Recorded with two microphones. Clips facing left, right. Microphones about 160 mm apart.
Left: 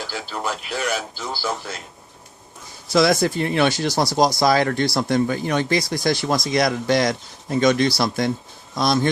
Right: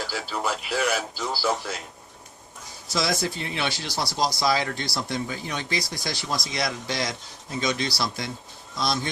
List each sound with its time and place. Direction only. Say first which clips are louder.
0.1 s speech: left 1 dB; centre (ahead or behind)
2.9 s speech: left 9 dB; 55° left (ahead or behind)